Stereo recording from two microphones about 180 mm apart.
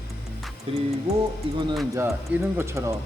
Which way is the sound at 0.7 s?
30° right (ahead or behind).